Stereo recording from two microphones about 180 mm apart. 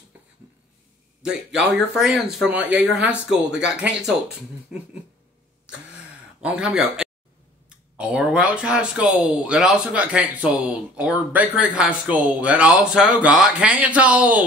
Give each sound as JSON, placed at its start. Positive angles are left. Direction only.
{"t": 1.2, "sound": "speech", "side_deg": -5}
{"t": 6.4, "sound": "speech", "side_deg": -5}